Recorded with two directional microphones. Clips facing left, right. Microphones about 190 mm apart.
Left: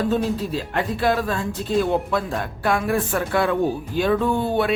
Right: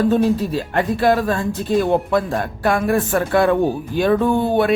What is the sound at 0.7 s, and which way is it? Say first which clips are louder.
Speech: right 5 dB; 50° right (ahead or behind).